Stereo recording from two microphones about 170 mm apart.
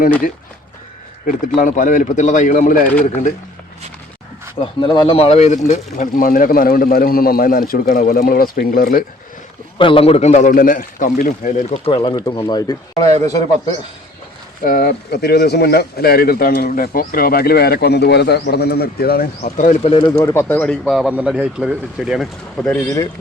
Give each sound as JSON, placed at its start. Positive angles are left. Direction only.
{"t": 1.3, "sound": "speech", "side_deg": 50}
{"t": 4.6, "sound": "speech", "side_deg": 30}
{"t": 9.7, "sound": "speech", "side_deg": 30}
{"t": 11.9, "sound": "speech", "side_deg": 25}
{"t": 13.1, "sound": "a man's voice", "side_deg": -40}
{"t": 14.6, "sound": "speech", "side_deg": 55}
{"t": 19.8, "sound": "speech", "side_deg": 30}
{"t": 20.2, "sound": "speech", "side_deg": 15}